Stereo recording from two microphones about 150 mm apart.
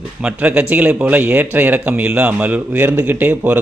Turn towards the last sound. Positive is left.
turn(degrees=-10)  # may be behind; listen again after turning